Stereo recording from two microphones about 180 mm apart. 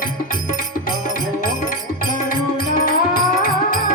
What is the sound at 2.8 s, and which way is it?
Music, 50° left (ahead or behind).